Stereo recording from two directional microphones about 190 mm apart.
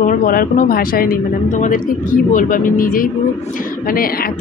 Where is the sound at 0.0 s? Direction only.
45° left (ahead or behind).